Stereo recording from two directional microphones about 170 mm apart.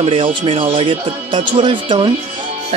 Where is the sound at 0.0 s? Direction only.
30° right (ahead or behind).